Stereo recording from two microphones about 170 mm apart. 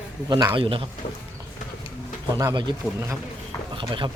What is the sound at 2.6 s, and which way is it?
Speech, 25° right (ahead or behind).